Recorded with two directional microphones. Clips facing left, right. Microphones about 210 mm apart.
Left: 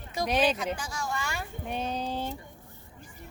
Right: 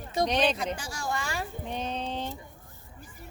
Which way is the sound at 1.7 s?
10° left (ahead or behind).